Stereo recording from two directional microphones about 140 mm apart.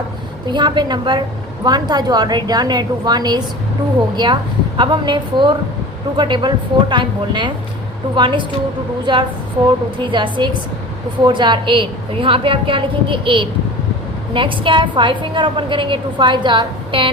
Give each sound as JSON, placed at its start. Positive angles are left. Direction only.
{"t": 0.4, "sound": "a woman's voice", "side_deg": -35}
{"t": 4.8, "sound": "a woman's voice", "side_deg": -35}